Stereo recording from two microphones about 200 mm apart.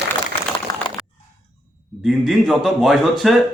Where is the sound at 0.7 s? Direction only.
20° left (ahead or behind).